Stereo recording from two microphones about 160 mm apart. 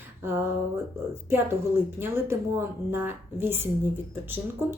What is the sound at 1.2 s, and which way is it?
A woman's voice, 15° right (ahead or behind).